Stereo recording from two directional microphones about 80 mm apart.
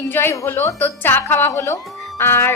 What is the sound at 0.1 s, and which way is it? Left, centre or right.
A woman's voice, left.